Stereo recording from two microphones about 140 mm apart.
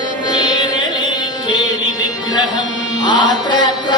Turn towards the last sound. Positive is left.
turn(degrees=30)  # may be behind; listen again after turning